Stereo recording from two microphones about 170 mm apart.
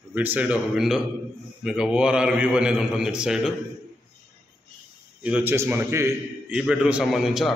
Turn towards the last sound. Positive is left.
turn(degrees=0)  # may be behind; listen again after turning